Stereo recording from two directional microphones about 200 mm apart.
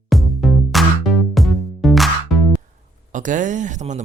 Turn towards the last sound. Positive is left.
turn(degrees=-35)  # may be behind; listen again after turning